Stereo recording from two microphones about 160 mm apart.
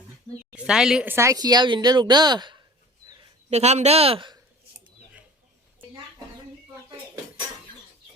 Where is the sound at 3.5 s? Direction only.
45° right (ahead or behind).